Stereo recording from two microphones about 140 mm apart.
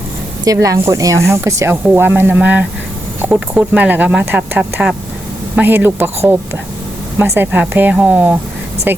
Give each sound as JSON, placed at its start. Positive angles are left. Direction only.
{"t": 0.4, "sound": "speech", "side_deg": -25}